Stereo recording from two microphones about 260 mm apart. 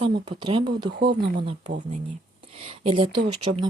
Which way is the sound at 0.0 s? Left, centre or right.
Centre.